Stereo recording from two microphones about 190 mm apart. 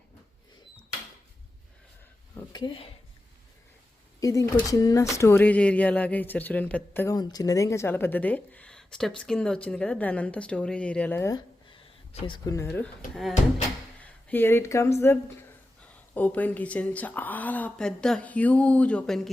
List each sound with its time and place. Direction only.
2.5 s speech: 25° left (ahead or behind)
4.2 s speech: 20° left (ahead or behind)
12.6 s speech: 5° left (ahead or behind)
14.3 s speech: 10° left (ahead or behind)